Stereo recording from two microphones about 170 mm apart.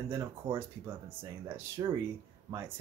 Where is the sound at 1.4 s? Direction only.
15° right (ahead or behind).